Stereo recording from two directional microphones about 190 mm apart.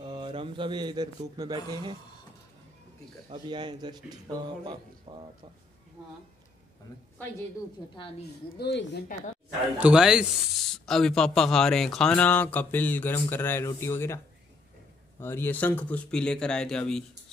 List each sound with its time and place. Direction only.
0.0 s speech: 25° right (ahead or behind)
3.3 s speech: 25° right (ahead or behind)
8.5 s speech: 60° left (ahead or behind)
9.8 s speech: 5° right (ahead or behind)